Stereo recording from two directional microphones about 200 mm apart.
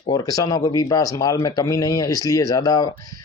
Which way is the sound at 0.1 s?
15° left (ahead or behind).